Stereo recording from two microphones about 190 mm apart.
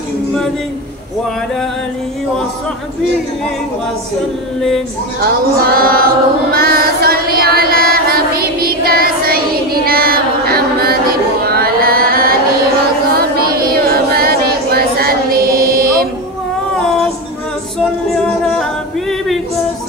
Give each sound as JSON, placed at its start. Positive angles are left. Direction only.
{"t": 4.6, "sound": "speech", "side_deg": 0}
{"t": 5.2, "sound": "music", "side_deg": -50}
{"t": 9.8, "sound": "a sound", "side_deg": -50}
{"t": 13.4, "sound": "child singing", "side_deg": -50}
{"t": 18.1, "sound": "singing", "side_deg": 0}